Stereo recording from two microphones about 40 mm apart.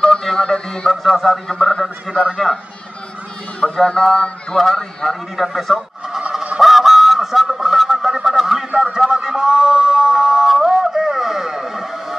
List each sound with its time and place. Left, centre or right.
0.0 s music: centre
1.0 s a man's voice: centre
1.5 s speech: centre
2.4 s a man's voice: centre
3.6 s speech: centre
4.6 s music: centre
5.3 s a man's voice: centre
6.6 s goose: centre
8.9 s a sound: centre